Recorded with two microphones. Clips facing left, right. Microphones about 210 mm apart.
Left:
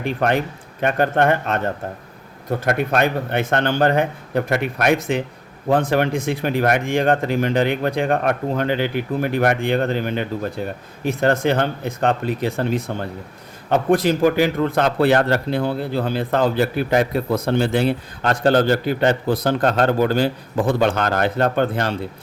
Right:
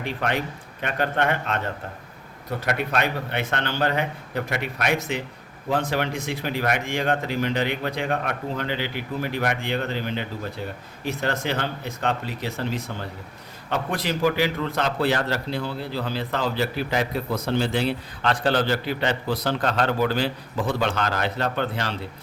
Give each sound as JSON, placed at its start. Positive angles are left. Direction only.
{"t": 0.0, "sound": "a man's voice", "side_deg": 50}